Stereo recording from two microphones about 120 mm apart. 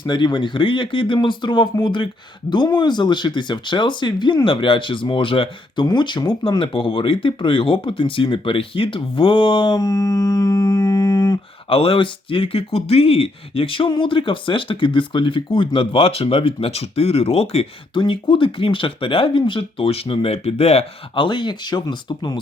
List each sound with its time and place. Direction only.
0.0 s speech: 40° left (ahead or behind)
11.7 s speech: 50° left (ahead or behind)
21.2 s speech: 40° left (ahead or behind)